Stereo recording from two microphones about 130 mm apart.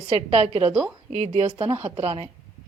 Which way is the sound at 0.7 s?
5° right (ahead or behind).